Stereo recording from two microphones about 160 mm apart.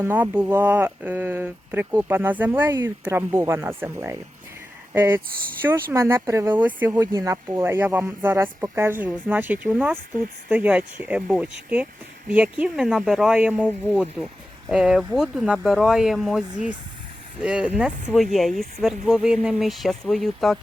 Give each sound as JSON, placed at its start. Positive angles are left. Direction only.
{"t": 0.0, "sound": "speech", "side_deg": -10}
{"t": 6.9, "sound": "speech", "side_deg": -20}